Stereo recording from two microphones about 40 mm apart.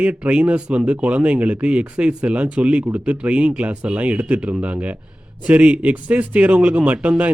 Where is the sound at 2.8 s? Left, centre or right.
Right.